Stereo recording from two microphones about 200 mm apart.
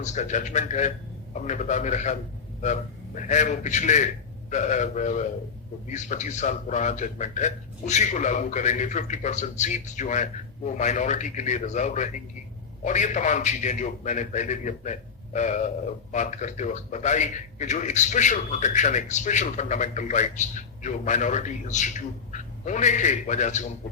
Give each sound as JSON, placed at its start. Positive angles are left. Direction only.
{"t": 0.0, "sound": "a man's voice", "side_deg": 35}
{"t": 3.2, "sound": "a man's voice", "side_deg": 40}